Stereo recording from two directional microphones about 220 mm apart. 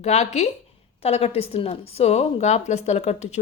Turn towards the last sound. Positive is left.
turn(degrees=30)  # may be behind; listen again after turning